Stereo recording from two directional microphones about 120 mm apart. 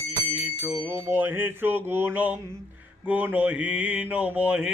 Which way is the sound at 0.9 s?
20° right (ahead or behind).